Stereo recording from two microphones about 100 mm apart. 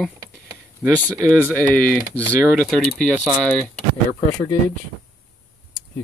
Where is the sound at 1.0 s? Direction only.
35° right (ahead or behind).